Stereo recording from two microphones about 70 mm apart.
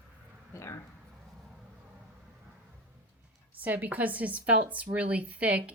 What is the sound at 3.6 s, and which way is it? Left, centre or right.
A woman's voice, right.